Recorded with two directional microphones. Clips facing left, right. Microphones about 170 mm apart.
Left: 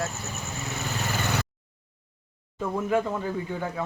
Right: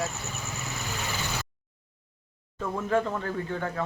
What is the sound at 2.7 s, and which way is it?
A man's voice, 10° left (ahead or behind).